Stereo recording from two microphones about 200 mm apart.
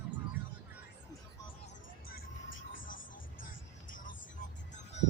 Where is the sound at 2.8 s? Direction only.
45° left (ahead or behind).